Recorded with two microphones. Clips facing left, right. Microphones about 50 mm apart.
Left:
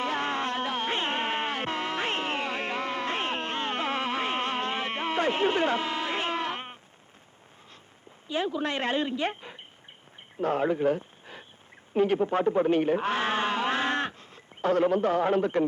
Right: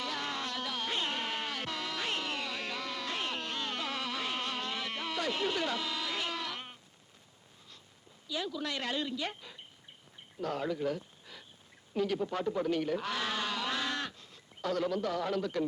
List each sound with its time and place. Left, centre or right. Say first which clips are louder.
0.0 s music: left 8 dB; left
8.3 s speech: left 7 dB; left